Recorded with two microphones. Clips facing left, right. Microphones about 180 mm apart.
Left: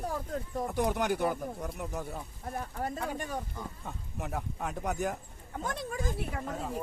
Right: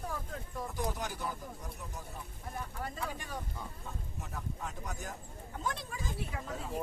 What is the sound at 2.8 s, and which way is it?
Speech, 45° left (ahead or behind).